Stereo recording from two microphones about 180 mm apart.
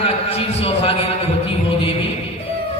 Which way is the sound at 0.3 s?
35° left (ahead or behind).